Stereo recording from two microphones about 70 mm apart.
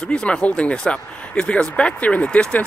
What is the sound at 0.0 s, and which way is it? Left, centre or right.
Speech, centre.